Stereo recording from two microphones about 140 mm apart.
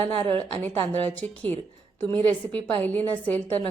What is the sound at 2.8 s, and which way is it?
Speech, 10° left (ahead or behind).